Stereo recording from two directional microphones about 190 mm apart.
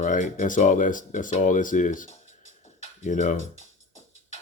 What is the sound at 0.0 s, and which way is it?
Speech, 40° left (ahead or behind).